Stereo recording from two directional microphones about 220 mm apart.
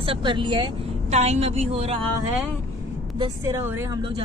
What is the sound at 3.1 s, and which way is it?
Speech, 15° right (ahead or behind).